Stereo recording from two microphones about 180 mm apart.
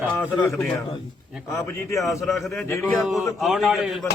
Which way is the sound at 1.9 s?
15° left (ahead or behind).